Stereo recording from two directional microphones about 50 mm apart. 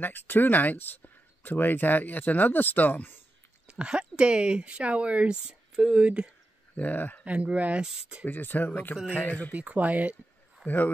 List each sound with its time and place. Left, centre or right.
0.0 s speech: left
3.6 s speech: centre
6.7 s speech: left
7.2 s speech: right
7.8 s speech: centre
8.3 s speech: left
9.5 s speech: right
10.6 s a man's voice: left